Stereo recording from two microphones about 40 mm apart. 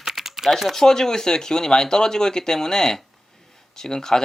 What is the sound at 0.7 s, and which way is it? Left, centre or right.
Speech, centre.